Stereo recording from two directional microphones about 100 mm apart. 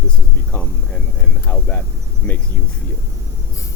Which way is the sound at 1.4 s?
15° left (ahead or behind).